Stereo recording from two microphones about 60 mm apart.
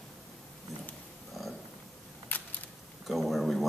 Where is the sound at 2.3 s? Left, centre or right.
Left.